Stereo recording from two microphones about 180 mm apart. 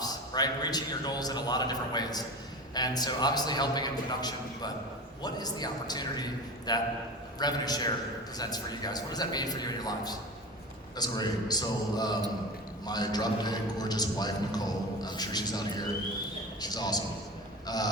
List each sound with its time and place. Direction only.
0.0 s a man's voice: 20° left (ahead or behind)